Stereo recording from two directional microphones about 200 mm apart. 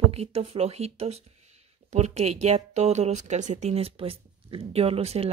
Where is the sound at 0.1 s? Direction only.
30° right (ahead or behind).